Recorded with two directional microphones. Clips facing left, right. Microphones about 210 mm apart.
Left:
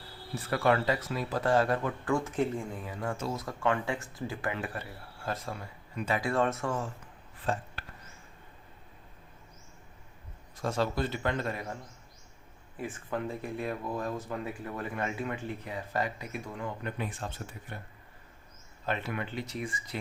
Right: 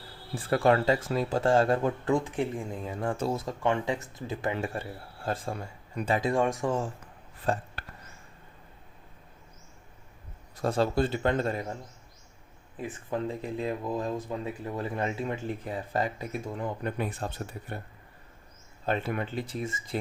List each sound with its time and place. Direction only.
0.4 s speech: 30° right (ahead or behind)
2.1 s speech: 15° right (ahead or behind)
6.3 s speech: 15° right (ahead or behind)
7.5 s speech: 35° right (ahead or behind)
10.6 s speech: 30° right (ahead or behind)
12.7 s speech: 20° right (ahead or behind); by 17.3 s 40° right (ahead or behind)
18.9 s speech: 30° right (ahead or behind)